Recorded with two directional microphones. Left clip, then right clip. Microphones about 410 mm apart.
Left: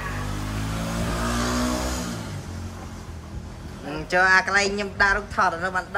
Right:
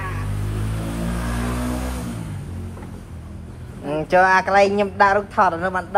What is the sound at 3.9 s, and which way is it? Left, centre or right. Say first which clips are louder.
Speech: right 3 dB; centre.